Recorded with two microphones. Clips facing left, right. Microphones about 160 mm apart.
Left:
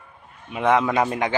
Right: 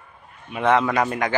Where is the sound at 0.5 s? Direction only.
15° left (ahead or behind).